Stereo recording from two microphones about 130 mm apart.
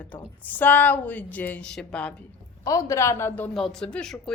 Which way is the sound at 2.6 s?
25° left (ahead or behind).